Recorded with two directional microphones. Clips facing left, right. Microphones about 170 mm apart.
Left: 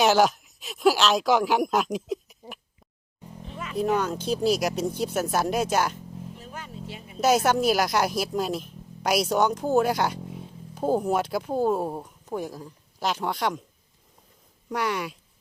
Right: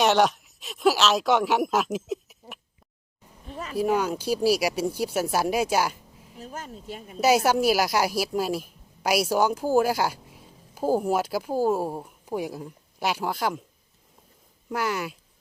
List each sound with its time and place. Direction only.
0.0 s speech: centre (ahead or behind)
3.4 s music: 40° right (ahead or behind)
3.8 s speech: 10° right (ahead or behind)
6.4 s a sound: 40° right (ahead or behind)
7.2 s a woman's voice: 5° right (ahead or behind)
14.7 s a woman's voice: centre (ahead or behind)